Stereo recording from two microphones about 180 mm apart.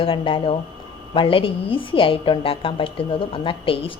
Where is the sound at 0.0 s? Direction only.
30° left (ahead or behind).